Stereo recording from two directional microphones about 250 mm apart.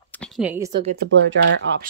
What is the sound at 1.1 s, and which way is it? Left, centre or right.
Speech, right.